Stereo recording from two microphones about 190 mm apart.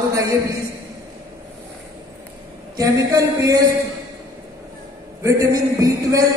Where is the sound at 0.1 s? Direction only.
15° right (ahead or behind).